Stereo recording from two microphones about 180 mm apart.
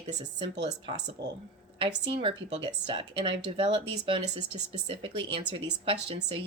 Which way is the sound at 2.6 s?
25° right (ahead or behind).